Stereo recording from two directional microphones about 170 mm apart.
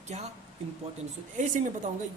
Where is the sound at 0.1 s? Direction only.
45° right (ahead or behind).